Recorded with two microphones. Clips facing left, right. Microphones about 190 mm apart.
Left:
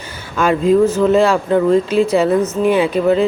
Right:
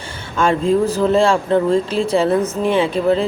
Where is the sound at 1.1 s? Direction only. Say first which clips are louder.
Left 2 dB; 30° right (ahead or behind).